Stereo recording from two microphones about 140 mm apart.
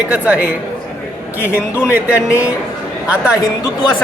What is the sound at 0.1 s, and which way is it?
Music, 10° right (ahead or behind).